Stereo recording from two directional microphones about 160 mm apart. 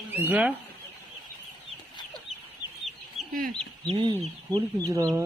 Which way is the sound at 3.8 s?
35° right (ahead or behind).